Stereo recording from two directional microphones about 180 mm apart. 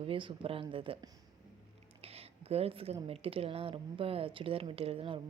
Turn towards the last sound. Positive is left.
turn(degrees=-30)  # may be behind; listen again after turning